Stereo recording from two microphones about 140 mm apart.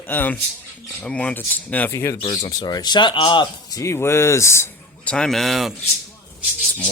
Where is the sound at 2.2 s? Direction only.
30° left (ahead or behind).